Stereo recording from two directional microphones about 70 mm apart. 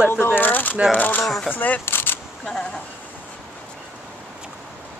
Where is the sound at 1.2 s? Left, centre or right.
Centre.